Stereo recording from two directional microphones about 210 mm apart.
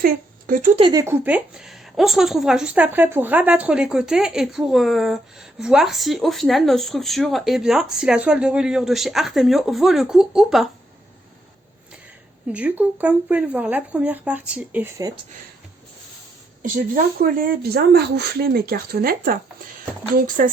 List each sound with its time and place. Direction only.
0.0 s a sound: 40° right (ahead or behind)
0.8 s a woman's voice: 20° right (ahead or behind); by 10.7 s centre (ahead or behind)
12.5 s speech: 5° right (ahead or behind)
16.6 s speech: 45° right (ahead or behind)